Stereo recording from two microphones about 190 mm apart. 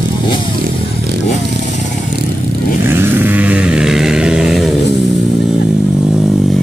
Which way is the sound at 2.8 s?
10° right (ahead or behind).